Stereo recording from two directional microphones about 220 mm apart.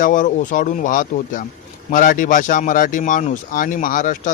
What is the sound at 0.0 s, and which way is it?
Speech, 35° left (ahead or behind).